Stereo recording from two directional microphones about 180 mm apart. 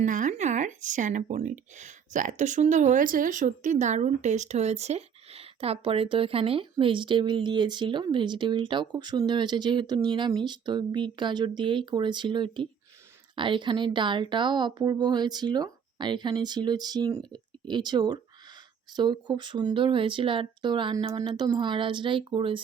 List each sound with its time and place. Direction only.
0.0 s speech: 45° right (ahead or behind); by 22.6 s 30° right (ahead or behind)